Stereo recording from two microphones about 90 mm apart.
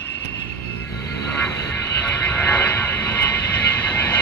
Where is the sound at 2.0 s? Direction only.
15° left (ahead or behind).